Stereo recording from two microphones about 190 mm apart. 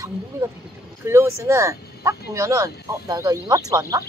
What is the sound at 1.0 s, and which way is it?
Speech, 15° right (ahead or behind).